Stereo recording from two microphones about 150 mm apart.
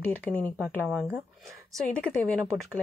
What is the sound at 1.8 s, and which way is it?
Speech, 5° left (ahead or behind).